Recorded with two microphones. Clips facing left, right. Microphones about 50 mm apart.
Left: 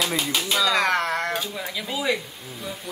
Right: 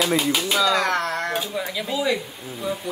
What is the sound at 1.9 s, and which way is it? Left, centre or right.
Speech, centre.